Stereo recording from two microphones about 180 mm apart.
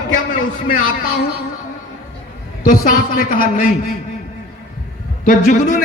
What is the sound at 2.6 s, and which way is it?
A man's voice, 50° left (ahead or behind).